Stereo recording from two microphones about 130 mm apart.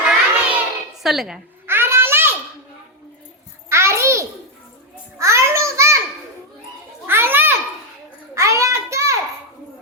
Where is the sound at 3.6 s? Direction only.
20° right (ahead or behind).